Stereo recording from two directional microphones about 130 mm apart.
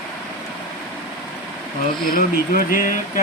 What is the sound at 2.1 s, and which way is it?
Speech, 90° left.